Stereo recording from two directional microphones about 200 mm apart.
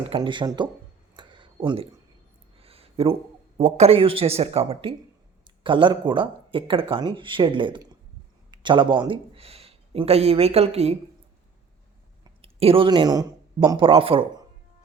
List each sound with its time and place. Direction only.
0.0 s speech: 25° right (ahead or behind)
1.1 s a sound: 25° right (ahead or behind)
3.6 s speech: 30° right (ahead or behind)
12.2 s speech: 30° right (ahead or behind)